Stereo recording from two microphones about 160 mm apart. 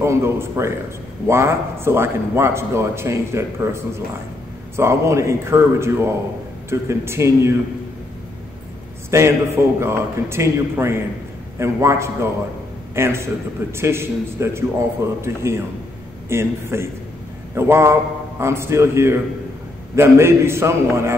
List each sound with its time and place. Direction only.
0.0 s a man's voice: 15° right (ahead or behind)
9.1 s a man's voice: 15° right (ahead or behind)